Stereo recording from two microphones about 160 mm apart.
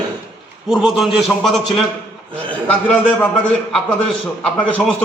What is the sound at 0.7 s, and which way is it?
Speech, 5° right (ahead or behind).